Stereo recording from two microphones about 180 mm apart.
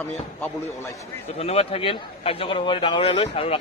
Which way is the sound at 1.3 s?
35° left (ahead or behind).